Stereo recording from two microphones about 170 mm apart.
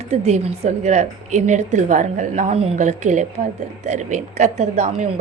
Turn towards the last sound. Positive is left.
turn(degrees=-40)  # may be behind; listen again after turning